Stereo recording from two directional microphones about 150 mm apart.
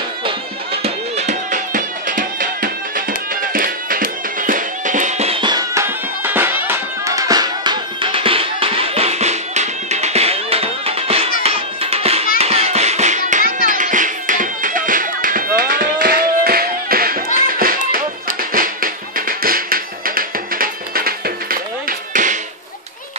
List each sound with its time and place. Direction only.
0.8 s music: 50° right (ahead or behind)
5.4 s music: 25° right (ahead or behind); by 22.4 s 60° right (ahead or behind)